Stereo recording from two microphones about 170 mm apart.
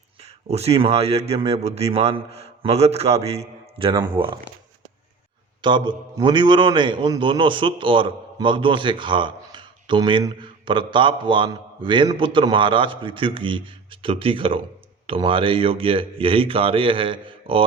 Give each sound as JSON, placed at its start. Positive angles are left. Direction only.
{"t": 0.2, "sound": "a man's voice", "side_deg": -35}
{"t": 5.6, "sound": "a man's voice", "side_deg": -25}